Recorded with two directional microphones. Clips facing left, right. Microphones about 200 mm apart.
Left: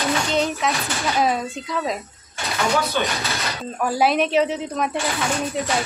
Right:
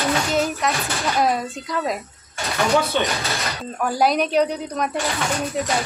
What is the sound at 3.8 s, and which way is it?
Speech, 5° left (ahead or behind).